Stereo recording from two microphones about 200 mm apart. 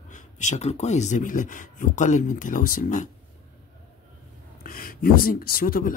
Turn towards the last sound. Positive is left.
turn(degrees=45)  # may be behind; listen again after turning